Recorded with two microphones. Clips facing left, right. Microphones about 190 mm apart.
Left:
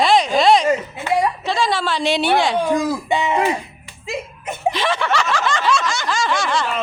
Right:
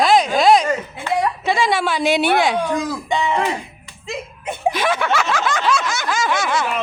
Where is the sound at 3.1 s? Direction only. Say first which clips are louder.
Even; 15° left (ahead or behind).